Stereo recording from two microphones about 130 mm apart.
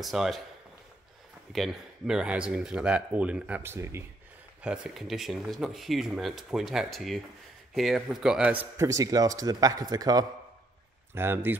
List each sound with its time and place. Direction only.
0.0 s speech: centre (ahead or behind)
1.5 s speech: centre (ahead or behind); by 4.0 s 20° right (ahead or behind)
4.6 s speech: 5° right (ahead or behind)
8.7 s speech: 25° right (ahead or behind)
11.1 s speech: 20° right (ahead or behind)